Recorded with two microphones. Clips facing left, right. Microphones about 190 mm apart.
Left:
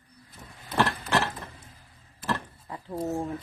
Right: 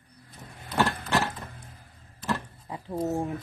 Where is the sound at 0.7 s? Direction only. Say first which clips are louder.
Even; centre (ahead or behind).